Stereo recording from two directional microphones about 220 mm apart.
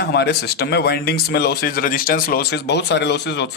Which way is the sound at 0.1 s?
50° left (ahead or behind).